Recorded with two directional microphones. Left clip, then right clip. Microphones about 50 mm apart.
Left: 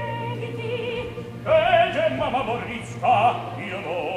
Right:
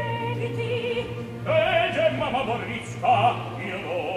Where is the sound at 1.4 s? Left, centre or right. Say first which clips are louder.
Left 4 dB; centre.